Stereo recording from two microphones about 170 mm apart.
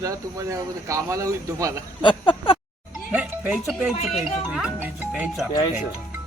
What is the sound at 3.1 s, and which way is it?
Speech, 10° right (ahead or behind).